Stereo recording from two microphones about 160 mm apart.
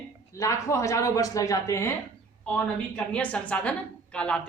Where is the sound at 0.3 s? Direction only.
20° left (ahead or behind).